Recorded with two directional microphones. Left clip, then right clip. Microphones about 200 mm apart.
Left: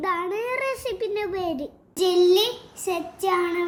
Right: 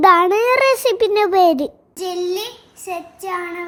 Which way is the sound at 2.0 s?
Centre (ahead or behind).